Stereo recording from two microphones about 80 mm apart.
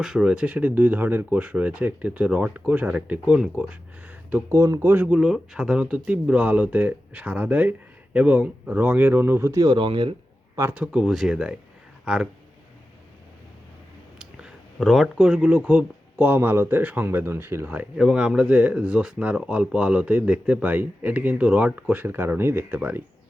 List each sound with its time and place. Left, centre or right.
0.0 s speech: centre; by 4.5 s right
4.5 s speech: right
5.1 s speech: centre; by 9.5 s right
9.6 s speech: right
10.8 s speech: centre
11.1 s speech: centre
14.2 s a sound: centre
14.8 s speech: centre; by 17.8 s right
17.9 s speech: centre